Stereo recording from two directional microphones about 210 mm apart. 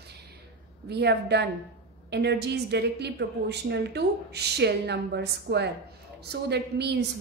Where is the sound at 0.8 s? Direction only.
55° right (ahead or behind).